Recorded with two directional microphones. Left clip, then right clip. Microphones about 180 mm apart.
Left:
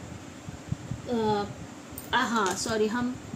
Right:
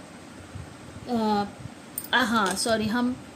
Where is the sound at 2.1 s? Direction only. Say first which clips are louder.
Right 3 dB; 55° right (ahead or behind).